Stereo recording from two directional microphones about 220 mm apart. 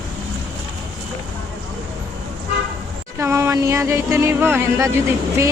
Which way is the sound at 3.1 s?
10° right (ahead or behind).